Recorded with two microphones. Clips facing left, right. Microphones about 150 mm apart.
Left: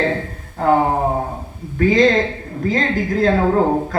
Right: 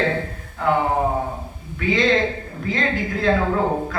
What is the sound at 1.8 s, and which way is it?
Speech, 40° left (ahead or behind).